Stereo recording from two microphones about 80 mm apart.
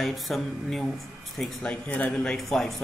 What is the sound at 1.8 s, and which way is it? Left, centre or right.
Speech, left.